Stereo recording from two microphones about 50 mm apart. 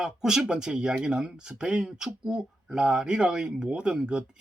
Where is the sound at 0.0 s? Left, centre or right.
Centre.